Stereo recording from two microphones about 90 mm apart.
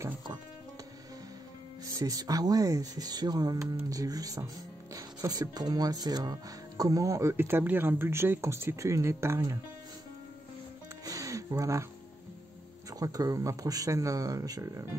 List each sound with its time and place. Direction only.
1.9 s speech: 40° right (ahead or behind)
11.1 s music: 40° right (ahead or behind)
13.0 s speech: 40° right (ahead or behind)